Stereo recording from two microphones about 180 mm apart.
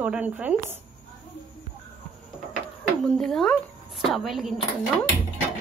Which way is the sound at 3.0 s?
5° left (ahead or behind).